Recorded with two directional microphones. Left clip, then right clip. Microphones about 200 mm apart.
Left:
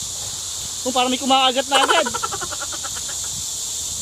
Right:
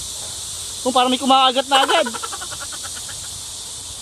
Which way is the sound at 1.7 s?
Centre (ahead or behind).